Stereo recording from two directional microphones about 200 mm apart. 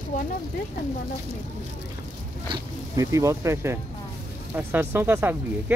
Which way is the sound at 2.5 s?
15° right (ahead or behind).